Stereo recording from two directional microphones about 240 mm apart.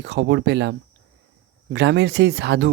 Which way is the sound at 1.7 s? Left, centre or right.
Right.